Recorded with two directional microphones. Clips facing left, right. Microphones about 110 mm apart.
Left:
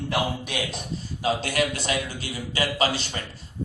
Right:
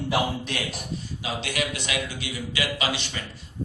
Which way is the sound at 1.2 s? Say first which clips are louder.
Left 6 dB; 40° left (ahead or behind).